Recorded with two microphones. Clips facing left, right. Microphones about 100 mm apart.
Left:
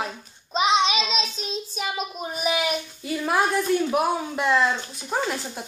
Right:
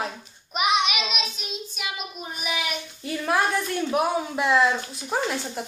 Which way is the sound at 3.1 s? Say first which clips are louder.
Left 1 dB; 5° left (ahead or behind).